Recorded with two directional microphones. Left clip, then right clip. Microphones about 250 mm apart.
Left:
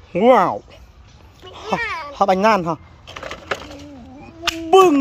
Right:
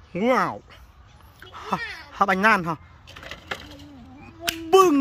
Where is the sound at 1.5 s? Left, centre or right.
Centre.